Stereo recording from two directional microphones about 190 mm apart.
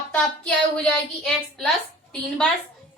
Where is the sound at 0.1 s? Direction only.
5° left (ahead or behind).